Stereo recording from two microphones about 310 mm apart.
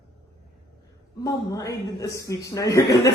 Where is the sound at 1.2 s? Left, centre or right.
Centre.